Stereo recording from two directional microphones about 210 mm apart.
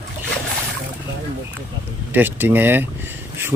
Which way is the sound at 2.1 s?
10° right (ahead or behind).